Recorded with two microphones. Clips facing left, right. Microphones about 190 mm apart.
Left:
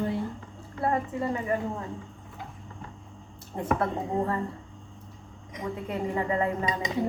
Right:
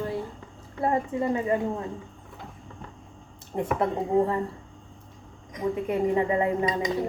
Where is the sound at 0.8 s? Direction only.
20° right (ahead or behind).